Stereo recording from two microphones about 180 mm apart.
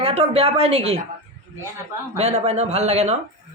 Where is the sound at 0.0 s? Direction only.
35° right (ahead or behind).